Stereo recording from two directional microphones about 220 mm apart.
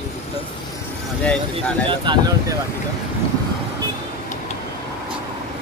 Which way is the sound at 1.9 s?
20° right (ahead or behind).